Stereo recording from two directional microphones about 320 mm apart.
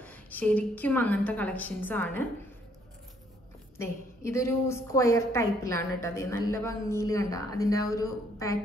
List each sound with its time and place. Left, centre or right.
0.0 s a woman's voice: centre
3.7 s a woman's voice: centre